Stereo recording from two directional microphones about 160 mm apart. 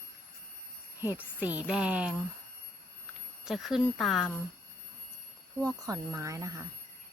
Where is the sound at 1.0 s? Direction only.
10° right (ahead or behind).